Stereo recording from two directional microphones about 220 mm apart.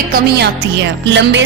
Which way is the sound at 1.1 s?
55° right (ahead or behind).